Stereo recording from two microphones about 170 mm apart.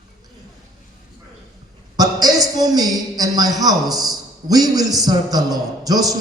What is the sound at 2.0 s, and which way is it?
A man's voice, 20° right (ahead or behind).